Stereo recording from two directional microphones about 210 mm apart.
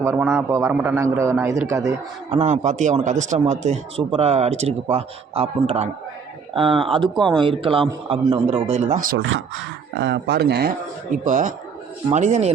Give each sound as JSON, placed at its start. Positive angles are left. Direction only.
{"t": 0.0, "sound": "a man's voice", "side_deg": -15}
{"t": 2.3, "sound": "speech", "side_deg": -30}
{"t": 10.0, "sound": "speech", "side_deg": -55}
{"t": 11.3, "sound": "speech", "side_deg": -35}